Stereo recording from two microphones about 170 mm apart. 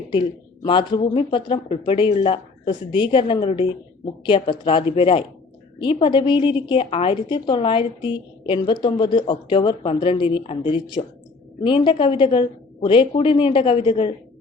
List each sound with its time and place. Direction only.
0.1 s a woman's voice: 30° left (ahead or behind)